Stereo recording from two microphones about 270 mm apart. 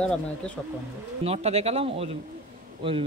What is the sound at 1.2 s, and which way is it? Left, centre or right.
Speech, right.